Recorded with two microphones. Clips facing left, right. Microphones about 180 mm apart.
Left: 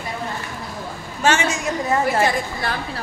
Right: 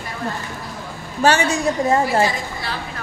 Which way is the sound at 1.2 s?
35° right (ahead or behind).